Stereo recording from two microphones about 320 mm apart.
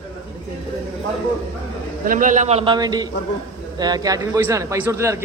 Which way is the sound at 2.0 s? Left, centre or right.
Right.